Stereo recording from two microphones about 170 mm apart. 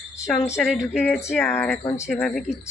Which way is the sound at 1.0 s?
10° left (ahead or behind).